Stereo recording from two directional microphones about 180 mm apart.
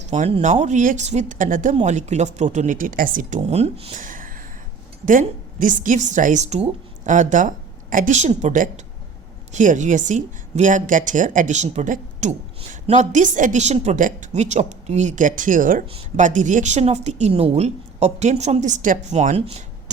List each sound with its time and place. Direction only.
0.0 s a woman's voice: 40° right (ahead or behind)
4.0 s a sound: 50° right (ahead or behind)
5.0 s a woman's voice: 45° right (ahead or behind)
15.9 s a woman's voice: 35° right (ahead or behind)